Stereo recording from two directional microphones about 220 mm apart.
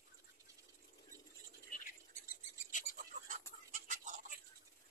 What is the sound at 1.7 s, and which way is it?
Bird, 35° left (ahead or behind).